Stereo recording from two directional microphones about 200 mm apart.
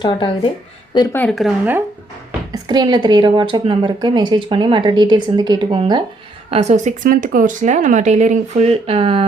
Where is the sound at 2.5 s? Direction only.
20° right (ahead or behind).